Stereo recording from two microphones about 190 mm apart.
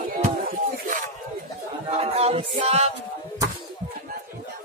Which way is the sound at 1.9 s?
35° right (ahead or behind).